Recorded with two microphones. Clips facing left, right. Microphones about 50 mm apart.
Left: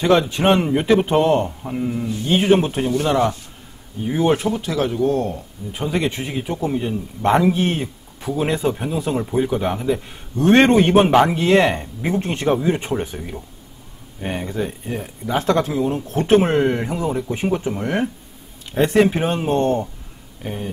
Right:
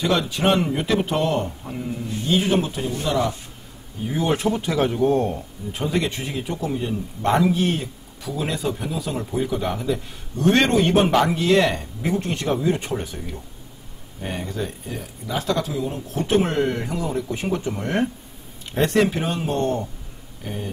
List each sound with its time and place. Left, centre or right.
0.2 s a man's voice: left
2.2 s speech: left
4.1 s a man's voice: left
4.5 s speech: centre
5.7 s a man's voice: centre
14.9 s a man's voice: left; by 19.1 s centre
19.1 s a man's voice: left